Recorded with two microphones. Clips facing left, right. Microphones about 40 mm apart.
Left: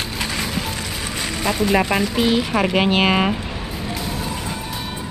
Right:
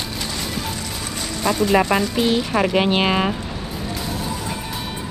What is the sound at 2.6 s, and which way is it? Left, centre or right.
Speech, left.